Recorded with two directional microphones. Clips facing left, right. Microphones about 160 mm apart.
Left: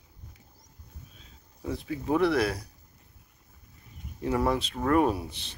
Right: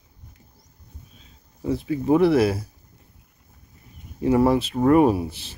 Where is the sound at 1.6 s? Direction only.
5° right (ahead or behind).